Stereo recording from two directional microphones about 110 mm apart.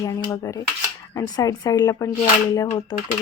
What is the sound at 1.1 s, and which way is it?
A woman's voice, 35° left (ahead or behind).